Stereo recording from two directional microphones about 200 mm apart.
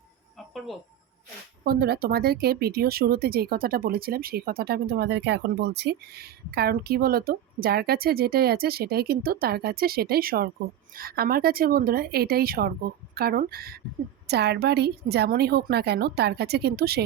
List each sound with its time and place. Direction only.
1.6 s speech: 50° right (ahead or behind)